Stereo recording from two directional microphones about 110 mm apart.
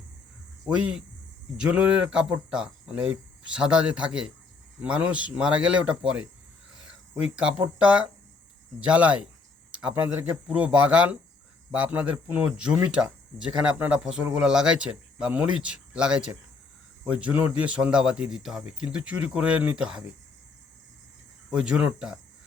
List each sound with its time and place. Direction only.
0.8 s speech: 10° right (ahead or behind)
7.3 s speech: 10° right (ahead or behind)
21.5 s speech: 10° right (ahead or behind)